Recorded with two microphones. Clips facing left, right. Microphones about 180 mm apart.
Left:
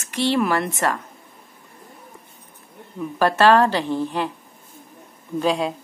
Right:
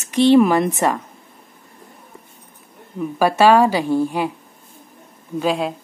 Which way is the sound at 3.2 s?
10° right (ahead or behind).